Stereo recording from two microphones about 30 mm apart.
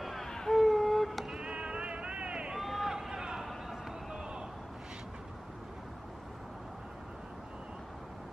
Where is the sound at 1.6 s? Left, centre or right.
Right.